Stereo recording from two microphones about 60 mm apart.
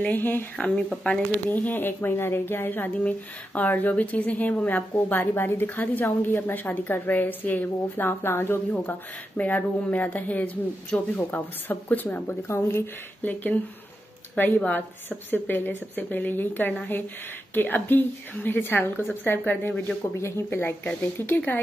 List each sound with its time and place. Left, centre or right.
0.0 s a woman's voice: left
1.0 s speech: left
4.9 s a woman's voice: left
12.4 s speech: left
13.2 s a woman's voice: left
20.0 s speech: left
20.8 s speech: left